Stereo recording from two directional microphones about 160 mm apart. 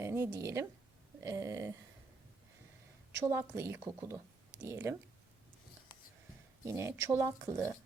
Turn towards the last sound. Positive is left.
turn(degrees=-15)  # may be behind; listen again after turning